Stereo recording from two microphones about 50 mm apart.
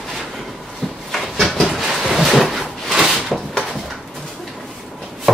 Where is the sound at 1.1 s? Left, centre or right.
Centre.